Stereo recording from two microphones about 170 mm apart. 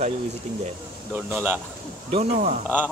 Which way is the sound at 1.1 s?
10° right (ahead or behind).